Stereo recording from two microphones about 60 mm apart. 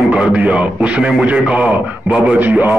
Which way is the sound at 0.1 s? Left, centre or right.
Right.